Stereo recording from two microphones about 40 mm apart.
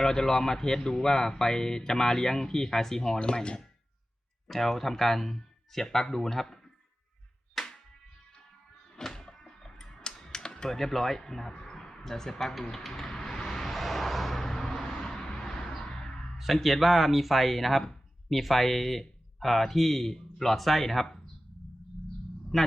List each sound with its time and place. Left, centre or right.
0.0 s speech: centre
3.2 s speech: left
4.4 s speech: centre
7.6 s music: centre
9.0 s a sound: centre
16.4 s speech: centre
22.5 s speech: centre